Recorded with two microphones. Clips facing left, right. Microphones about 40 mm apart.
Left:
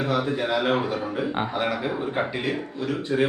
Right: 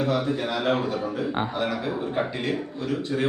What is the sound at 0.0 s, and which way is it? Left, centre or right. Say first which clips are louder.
A man's voice: even; centre.